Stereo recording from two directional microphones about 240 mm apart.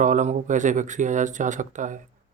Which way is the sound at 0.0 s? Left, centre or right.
Right.